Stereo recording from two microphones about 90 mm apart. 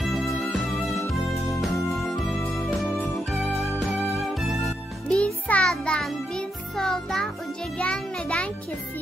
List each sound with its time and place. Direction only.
0.0 s music: centre (ahead or behind)
3.3 s music: centre (ahead or behind)
5.0 s music: 15° left (ahead or behind)